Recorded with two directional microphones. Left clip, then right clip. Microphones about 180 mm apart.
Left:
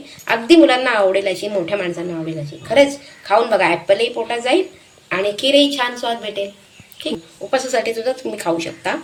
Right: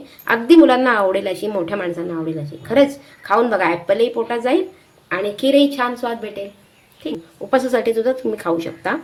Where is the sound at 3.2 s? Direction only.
45° right (ahead or behind).